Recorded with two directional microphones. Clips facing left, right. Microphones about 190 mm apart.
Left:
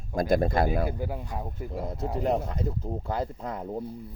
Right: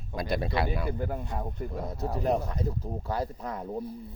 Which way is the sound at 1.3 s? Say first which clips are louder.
Even; 5° left (ahead or behind).